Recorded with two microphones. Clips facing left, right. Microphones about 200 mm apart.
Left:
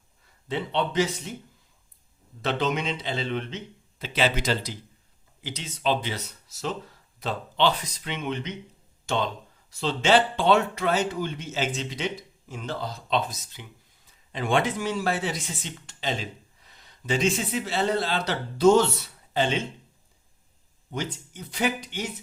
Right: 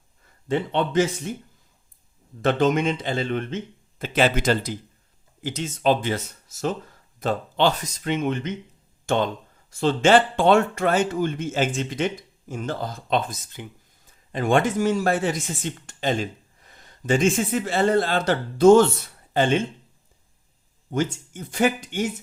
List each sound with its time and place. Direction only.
0.4 s speech: 50° right (ahead or behind)
2.4 s speech: 50° right (ahead or behind)
20.9 s speech: 50° right (ahead or behind)